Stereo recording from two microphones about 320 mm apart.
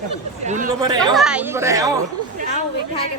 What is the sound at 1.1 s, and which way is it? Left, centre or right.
Speech, centre.